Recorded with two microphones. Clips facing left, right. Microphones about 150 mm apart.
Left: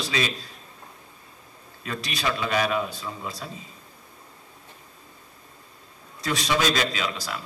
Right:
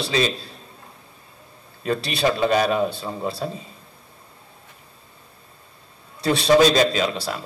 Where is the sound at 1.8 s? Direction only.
30° right (ahead or behind).